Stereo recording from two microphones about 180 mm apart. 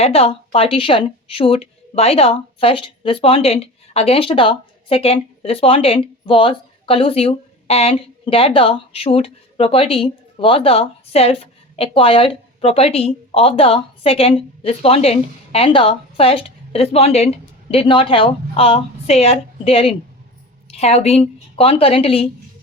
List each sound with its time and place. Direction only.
0.0 s a woman's voice: 35° left (ahead or behind)